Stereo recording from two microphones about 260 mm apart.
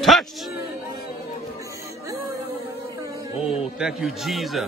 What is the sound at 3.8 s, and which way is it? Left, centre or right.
Speech, centre.